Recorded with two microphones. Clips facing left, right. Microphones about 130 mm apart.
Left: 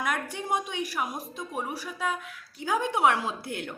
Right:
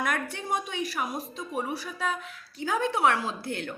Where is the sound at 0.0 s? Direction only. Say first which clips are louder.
Even; 10° left (ahead or behind).